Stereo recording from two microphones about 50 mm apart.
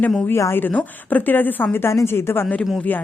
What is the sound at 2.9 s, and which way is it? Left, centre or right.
Speech, left.